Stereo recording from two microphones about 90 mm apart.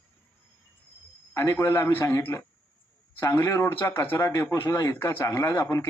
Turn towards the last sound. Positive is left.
turn(degrees=30)  # may be behind; listen again after turning